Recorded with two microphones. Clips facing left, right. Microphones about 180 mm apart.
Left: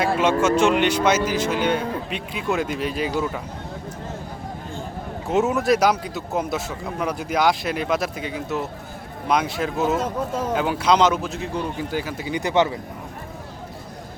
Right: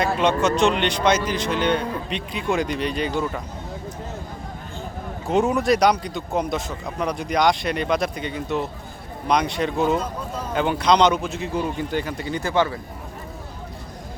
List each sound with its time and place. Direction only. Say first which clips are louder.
0.0 s speech: left 1 dB; 5° left (ahead or behind)
5.3 s speech: even; 5° left (ahead or behind)
12.4 s speech: left 2 dB; 20° left (ahead or behind)